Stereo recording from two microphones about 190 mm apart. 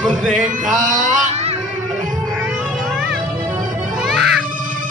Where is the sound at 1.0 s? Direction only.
35° right (ahead or behind).